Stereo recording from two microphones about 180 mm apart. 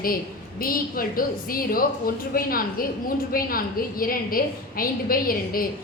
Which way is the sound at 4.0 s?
55° left (ahead or behind).